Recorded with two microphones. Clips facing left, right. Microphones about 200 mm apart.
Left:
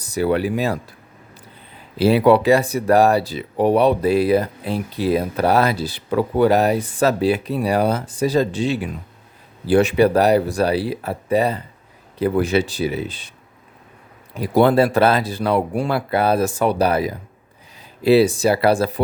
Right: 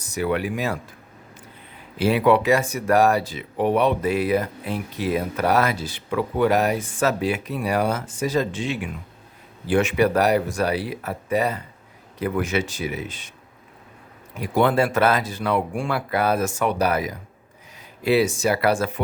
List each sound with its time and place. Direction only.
0.0 s speech: 35° left (ahead or behind)
2.0 s speech: 35° left (ahead or behind)
14.3 s speech: 35° left (ahead or behind)